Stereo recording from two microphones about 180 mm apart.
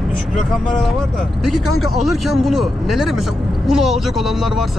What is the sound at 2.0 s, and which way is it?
Speech, centre (ahead or behind).